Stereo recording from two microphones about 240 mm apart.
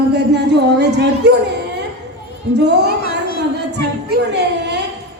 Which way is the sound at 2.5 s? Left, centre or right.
Right.